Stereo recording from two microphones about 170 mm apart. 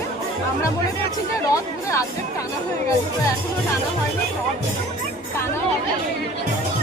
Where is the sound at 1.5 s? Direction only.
20° left (ahead or behind).